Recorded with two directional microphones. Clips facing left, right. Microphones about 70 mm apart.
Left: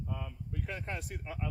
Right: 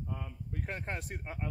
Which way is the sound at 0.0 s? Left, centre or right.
Left.